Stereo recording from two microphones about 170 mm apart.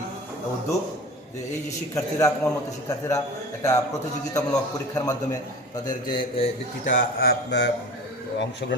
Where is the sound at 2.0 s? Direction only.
20° left (ahead or behind).